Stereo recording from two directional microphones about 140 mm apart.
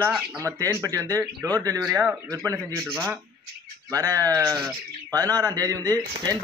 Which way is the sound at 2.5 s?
20° right (ahead or behind).